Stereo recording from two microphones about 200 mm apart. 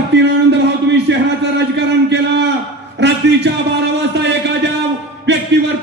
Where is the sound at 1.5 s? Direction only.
60° right (ahead or behind).